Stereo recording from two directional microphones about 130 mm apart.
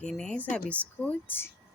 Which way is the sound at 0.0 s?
5° left (ahead or behind).